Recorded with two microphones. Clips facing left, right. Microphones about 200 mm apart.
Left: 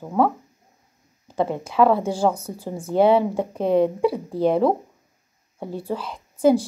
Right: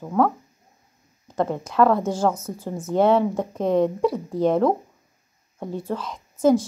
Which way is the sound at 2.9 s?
5° left (ahead or behind).